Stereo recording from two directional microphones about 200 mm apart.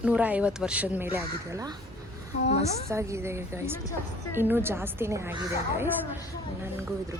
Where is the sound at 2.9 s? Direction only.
15° right (ahead or behind).